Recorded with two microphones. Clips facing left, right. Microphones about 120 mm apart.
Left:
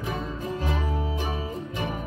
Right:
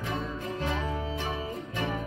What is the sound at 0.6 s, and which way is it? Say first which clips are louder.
Music: left 1 dB; 15° left (ahead or behind).